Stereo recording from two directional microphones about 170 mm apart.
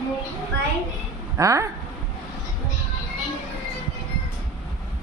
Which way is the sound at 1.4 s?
20° right (ahead or behind).